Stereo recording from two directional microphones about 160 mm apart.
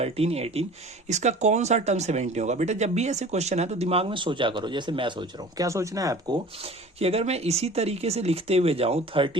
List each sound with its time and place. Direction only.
0.0 s speech: 40° right (ahead or behind); by 6.4 s 25° right (ahead or behind)
6.6 s speech: 40° right (ahead or behind)